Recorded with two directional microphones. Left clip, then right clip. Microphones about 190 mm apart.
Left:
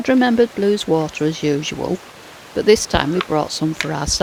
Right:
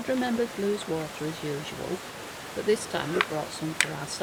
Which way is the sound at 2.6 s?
50° left (ahead or behind).